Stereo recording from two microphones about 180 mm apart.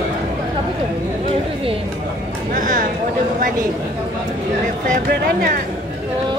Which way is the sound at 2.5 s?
50° right (ahead or behind).